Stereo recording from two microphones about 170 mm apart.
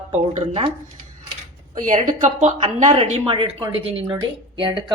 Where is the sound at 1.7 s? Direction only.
50° right (ahead or behind).